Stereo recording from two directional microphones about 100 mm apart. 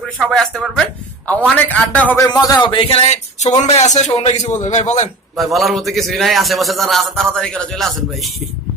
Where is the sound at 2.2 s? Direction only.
40° left (ahead or behind).